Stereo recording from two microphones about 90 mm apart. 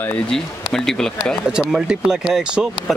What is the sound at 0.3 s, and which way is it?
Speech, 5° left (ahead or behind).